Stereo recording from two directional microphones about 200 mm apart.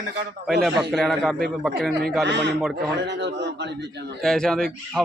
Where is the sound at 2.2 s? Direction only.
60° right (ahead or behind).